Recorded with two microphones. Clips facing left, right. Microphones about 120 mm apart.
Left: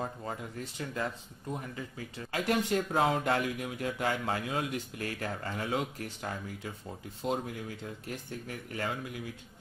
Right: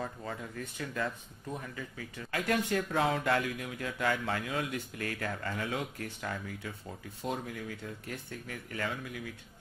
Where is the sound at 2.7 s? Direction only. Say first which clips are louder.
Left 2 dB; 35° left (ahead or behind).